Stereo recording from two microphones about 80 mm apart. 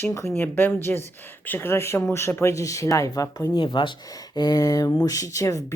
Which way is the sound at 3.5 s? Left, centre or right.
Left.